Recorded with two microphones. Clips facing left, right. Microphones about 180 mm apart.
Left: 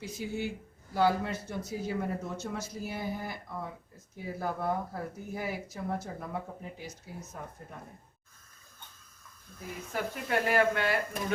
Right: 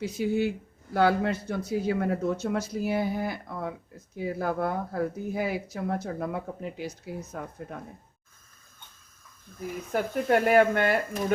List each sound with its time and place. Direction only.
0.0 s speech: 65° right (ahead or behind)
9.9 s speech: 50° right (ahead or behind)